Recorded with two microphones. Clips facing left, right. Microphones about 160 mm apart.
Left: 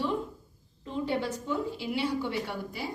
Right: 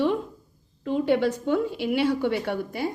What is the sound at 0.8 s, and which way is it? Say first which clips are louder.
A woman's voice: right 9 dB; 70° right (ahead or behind).